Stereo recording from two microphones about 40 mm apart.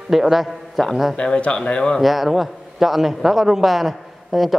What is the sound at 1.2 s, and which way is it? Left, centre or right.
Speech, left.